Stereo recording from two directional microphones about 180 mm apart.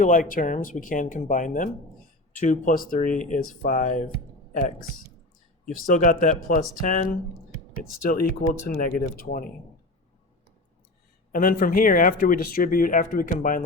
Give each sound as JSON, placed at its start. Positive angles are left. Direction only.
{"t": 0.0, "sound": "speech", "side_deg": 45}
{"t": 5.6, "sound": "speech", "side_deg": 45}
{"t": 11.3, "sound": "speech", "side_deg": 50}